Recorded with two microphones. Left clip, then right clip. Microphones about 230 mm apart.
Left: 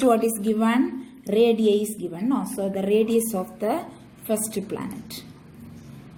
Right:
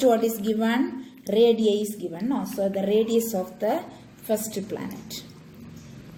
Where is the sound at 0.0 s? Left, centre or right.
Left.